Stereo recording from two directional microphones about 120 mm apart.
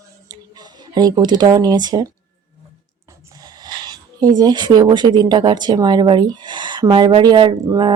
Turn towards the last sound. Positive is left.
turn(degrees=-35)  # may be behind; listen again after turning